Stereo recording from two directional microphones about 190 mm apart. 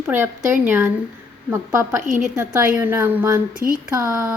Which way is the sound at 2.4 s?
10° right (ahead or behind).